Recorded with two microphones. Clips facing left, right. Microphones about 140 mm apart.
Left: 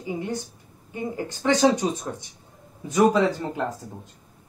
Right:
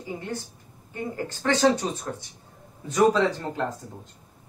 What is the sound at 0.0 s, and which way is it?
Speech, 15° left (ahead or behind).